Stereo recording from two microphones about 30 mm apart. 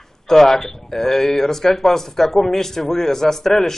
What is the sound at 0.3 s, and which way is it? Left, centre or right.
A man's voice, centre.